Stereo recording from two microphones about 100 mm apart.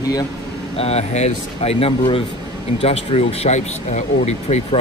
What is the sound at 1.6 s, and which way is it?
Speech, 75° left (ahead or behind).